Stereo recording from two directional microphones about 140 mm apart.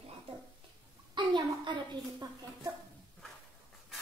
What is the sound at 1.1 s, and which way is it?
A woman's voice, 35° right (ahead or behind).